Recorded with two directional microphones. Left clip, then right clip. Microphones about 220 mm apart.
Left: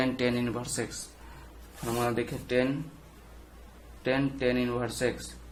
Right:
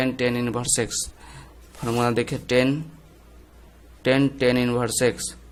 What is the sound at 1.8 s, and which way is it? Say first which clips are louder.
Speech: right 7 dB; 45° right (ahead or behind).